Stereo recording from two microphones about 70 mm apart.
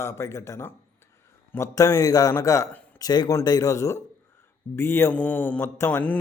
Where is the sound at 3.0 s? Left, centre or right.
Left.